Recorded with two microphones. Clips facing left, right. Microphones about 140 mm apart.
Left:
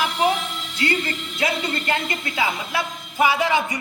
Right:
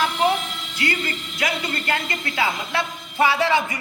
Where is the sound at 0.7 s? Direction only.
25° left (ahead or behind).